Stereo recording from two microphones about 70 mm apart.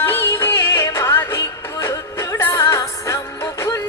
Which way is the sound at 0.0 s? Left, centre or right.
Left.